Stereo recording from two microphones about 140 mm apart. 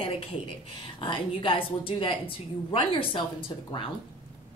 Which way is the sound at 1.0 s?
35° left (ahead or behind).